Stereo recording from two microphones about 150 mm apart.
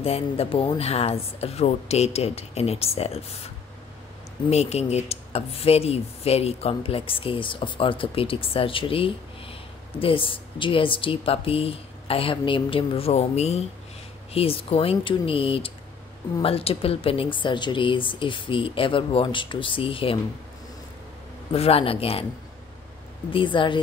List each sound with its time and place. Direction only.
0.0 s speech: 40° left (ahead or behind)
21.5 s speech: 40° left (ahead or behind)
23.3 s speech: 35° left (ahead or behind)